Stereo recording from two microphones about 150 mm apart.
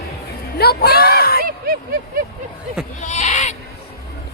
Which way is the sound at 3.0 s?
55° left (ahead or behind).